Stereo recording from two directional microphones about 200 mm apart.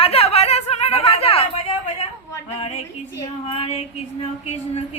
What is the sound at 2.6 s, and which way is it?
Female singing, 30° left (ahead or behind).